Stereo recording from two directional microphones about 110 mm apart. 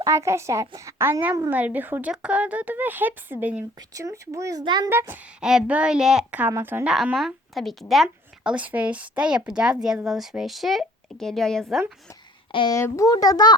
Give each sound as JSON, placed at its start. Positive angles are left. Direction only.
{"t": 0.0, "sound": "speech", "side_deg": -25}
{"t": 3.8, "sound": "speech", "side_deg": -30}
{"t": 4.6, "sound": "a child's voice", "side_deg": -40}
{"t": 4.9, "sound": "speech", "side_deg": -20}
{"t": 5.4, "sound": "speech", "side_deg": -5}
{"t": 6.5, "sound": "speech", "side_deg": -20}
{"t": 6.8, "sound": "a woman's voice", "side_deg": -5}
{"t": 12.5, "sound": "speech", "side_deg": 50}
{"t": 12.7, "sound": "a child's voice", "side_deg": 30}